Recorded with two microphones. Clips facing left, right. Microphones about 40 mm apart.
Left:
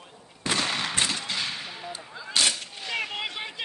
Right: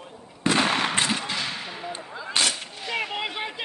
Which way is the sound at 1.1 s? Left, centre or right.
Right.